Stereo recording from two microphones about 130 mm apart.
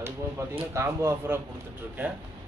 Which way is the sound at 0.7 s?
20° right (ahead or behind).